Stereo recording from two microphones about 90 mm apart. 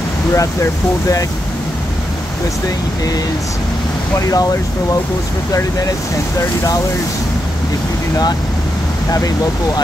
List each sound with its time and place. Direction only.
0.3 s speech: 35° left (ahead or behind)